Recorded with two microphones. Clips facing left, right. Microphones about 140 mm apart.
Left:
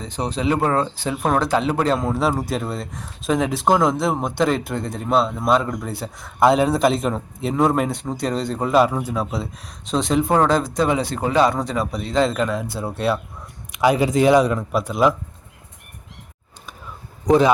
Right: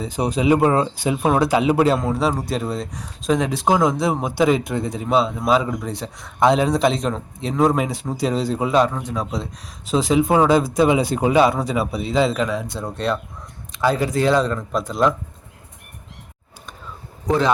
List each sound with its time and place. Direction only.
0.0 s speech: 10° right (ahead or behind)
13.7 s speech: 15° left (ahead or behind)
17.2 s a man's voice: 15° left (ahead or behind)